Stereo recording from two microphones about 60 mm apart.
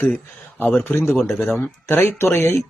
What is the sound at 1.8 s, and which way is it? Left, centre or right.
Speech, left.